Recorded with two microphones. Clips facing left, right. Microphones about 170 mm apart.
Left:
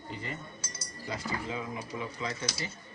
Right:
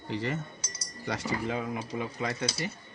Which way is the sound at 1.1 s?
75° right (ahead or behind).